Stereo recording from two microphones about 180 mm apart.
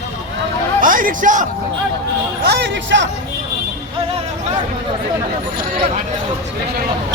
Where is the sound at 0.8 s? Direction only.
50° right (ahead or behind).